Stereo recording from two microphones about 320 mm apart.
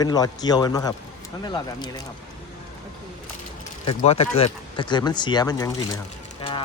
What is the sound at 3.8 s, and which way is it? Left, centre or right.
Speech, centre.